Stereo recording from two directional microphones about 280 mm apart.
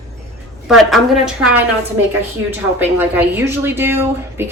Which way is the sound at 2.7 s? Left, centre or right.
Centre.